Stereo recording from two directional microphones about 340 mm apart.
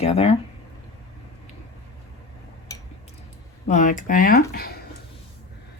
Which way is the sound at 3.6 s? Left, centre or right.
Left.